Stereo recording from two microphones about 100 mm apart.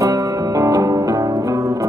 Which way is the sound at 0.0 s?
35° right (ahead or behind).